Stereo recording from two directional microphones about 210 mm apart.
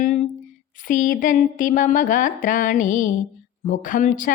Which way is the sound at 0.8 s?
40° left (ahead or behind).